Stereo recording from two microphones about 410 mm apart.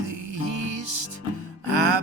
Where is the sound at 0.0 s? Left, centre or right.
Right.